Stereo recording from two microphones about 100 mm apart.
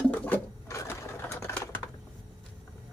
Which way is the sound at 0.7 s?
30° left (ahead or behind).